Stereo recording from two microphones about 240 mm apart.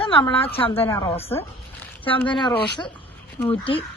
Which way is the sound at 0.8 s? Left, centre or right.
Centre.